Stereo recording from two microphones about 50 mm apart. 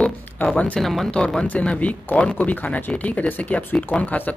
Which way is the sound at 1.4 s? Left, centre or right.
Left.